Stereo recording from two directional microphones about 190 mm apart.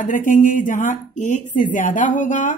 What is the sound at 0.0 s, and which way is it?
A woman's voice, 45° left (ahead or behind).